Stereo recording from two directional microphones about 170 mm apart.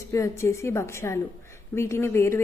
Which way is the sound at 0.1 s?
15° left (ahead or behind).